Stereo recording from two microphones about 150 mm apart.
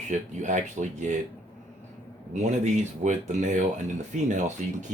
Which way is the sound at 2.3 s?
50° right (ahead or behind).